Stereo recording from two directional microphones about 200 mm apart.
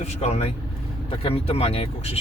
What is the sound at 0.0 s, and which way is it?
Speech, 35° left (ahead or behind).